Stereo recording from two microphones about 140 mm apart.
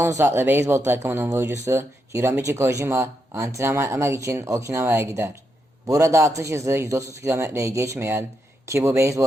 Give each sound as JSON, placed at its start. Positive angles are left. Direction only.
{"t": 0.0, "sound": "speech", "side_deg": -20}